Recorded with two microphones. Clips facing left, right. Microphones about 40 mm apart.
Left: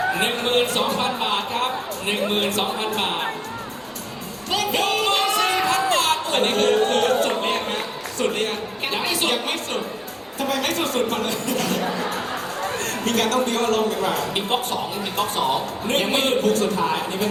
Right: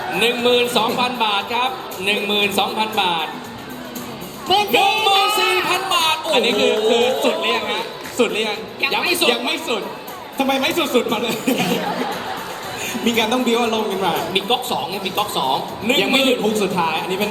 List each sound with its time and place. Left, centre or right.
0.2 s a man's voice: right
4.4 s a man's voice: right